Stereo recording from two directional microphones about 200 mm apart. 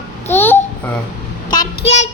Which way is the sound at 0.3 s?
10° left (ahead or behind).